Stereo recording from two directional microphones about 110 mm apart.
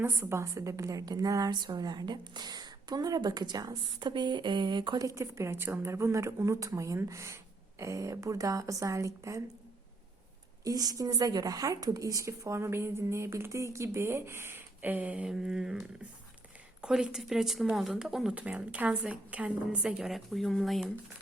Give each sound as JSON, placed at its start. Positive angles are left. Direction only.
{"t": 0.0, "sound": "a woman's voice", "side_deg": -25}
{"t": 5.0, "sound": "a woman's voice", "side_deg": -25}
{"t": 10.6, "sound": "a woman's voice", "side_deg": -35}
{"t": 16.8, "sound": "speech", "side_deg": -5}